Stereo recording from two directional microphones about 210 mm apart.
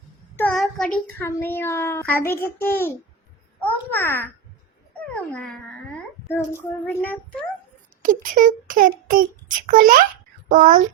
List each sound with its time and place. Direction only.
0.3 s a child's voice: 5° left (ahead or behind)
8.0 s speech: 40° right (ahead or behind)